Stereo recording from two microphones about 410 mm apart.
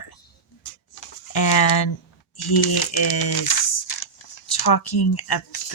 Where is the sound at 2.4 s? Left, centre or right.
Left.